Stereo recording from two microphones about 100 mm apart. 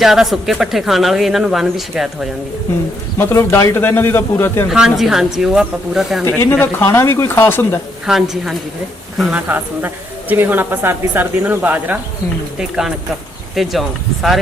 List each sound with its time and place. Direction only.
0.0 s speech: 5° right (ahead or behind)
3.2 s speech: 25° left (ahead or behind)
4.7 s speech: 5° right (ahead or behind)
6.2 s speech: 20° left (ahead or behind)
8.0 s speech: 5° right (ahead or behind)
9.3 s a woman's voice: 20° right (ahead or behind)
12.5 s speech: 10° right (ahead or behind)